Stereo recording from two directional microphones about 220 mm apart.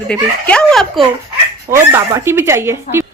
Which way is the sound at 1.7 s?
10° right (ahead or behind).